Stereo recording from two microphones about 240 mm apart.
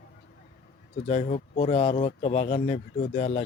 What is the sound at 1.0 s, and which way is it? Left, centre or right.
Speech, left.